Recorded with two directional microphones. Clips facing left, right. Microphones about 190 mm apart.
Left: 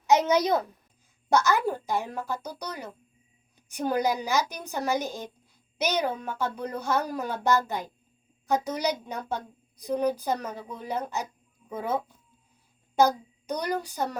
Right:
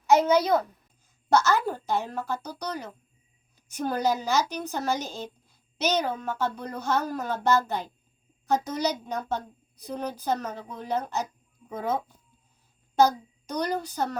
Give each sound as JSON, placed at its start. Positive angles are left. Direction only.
{"t": 0.1, "sound": "a sound", "side_deg": 20}
{"t": 1.3, "sound": "speech", "side_deg": 15}
{"t": 13.0, "sound": "a child's voice", "side_deg": 15}